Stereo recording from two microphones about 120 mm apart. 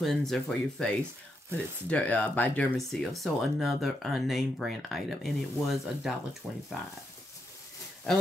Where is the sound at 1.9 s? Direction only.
15° left (ahead or behind).